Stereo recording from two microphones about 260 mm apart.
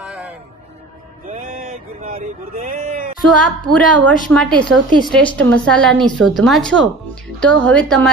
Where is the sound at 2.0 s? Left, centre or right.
Right.